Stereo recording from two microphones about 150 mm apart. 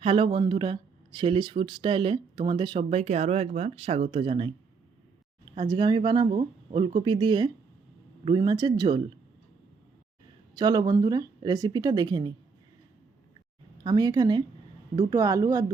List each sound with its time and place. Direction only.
0.0 s speech: 35° right (ahead or behind)
2.9 s speech: 50° right (ahead or behind)
5.5 s speech: 30° right (ahead or behind)
10.5 s speech: 25° right (ahead or behind)
13.8 s speech: 25° right (ahead or behind)